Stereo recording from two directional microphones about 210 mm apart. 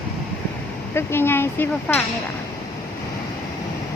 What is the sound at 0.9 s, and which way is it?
Speech, 10° left (ahead or behind).